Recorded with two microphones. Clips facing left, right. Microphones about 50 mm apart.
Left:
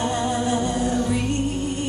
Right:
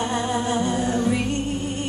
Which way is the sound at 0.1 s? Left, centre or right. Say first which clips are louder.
Left 1 dB; right.